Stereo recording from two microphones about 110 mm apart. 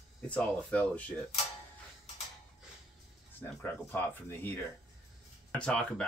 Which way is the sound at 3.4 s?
20° left (ahead or behind).